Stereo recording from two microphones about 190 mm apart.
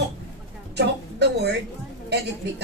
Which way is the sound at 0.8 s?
60° right (ahead or behind).